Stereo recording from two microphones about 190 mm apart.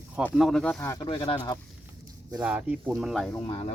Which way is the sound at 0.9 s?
25° left (ahead or behind).